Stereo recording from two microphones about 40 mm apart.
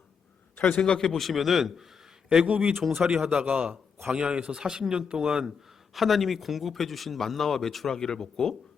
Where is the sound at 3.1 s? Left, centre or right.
Right.